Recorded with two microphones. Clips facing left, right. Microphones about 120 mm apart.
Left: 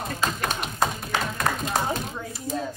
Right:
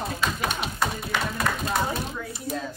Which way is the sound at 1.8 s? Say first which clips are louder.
Left 1 dB; 25° left (ahead or behind).